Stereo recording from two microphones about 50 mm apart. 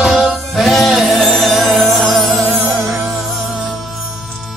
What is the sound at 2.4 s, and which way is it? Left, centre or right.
Music, right.